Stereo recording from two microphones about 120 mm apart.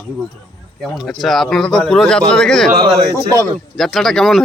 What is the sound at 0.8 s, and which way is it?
Speech, centre (ahead or behind).